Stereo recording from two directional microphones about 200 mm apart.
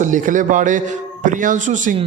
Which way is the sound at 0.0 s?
40° right (ahead or behind).